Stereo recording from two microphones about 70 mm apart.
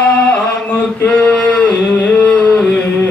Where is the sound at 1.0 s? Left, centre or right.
Left.